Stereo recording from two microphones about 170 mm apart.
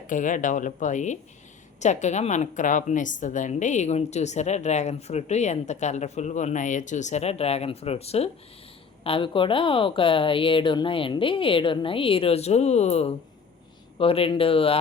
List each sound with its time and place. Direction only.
0.1 s a woman's voice: 50° left (ahead or behind); by 14.8 s 30° left (ahead or behind)